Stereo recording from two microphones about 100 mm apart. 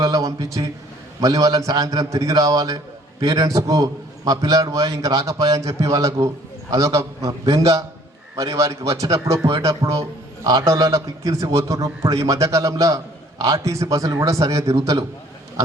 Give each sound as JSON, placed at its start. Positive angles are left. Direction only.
{"t": 0.0, "sound": "a man's voice", "side_deg": -35}